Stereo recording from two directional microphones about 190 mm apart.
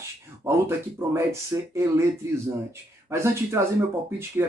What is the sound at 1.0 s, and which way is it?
Speech, 15° right (ahead or behind).